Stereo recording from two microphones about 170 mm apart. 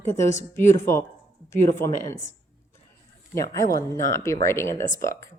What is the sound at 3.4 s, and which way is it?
Speech, 20° left (ahead or behind).